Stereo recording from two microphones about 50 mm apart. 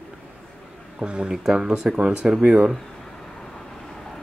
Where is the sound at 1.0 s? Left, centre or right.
Centre.